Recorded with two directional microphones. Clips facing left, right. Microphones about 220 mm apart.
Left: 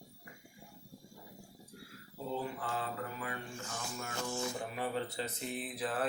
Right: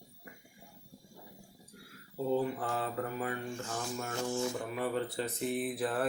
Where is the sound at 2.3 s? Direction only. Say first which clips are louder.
Right 6 dB; 45° right (ahead or behind).